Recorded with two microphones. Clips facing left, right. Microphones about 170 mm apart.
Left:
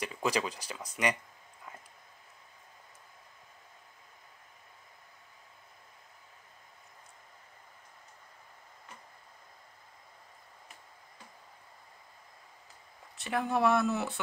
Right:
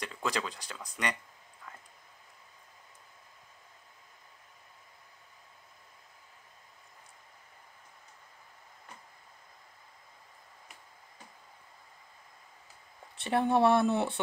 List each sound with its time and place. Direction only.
0.0 s speech: 10° left (ahead or behind)
13.2 s speech: 30° right (ahead or behind)